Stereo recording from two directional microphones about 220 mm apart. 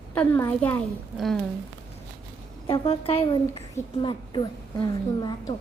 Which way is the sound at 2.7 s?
25° left (ahead or behind).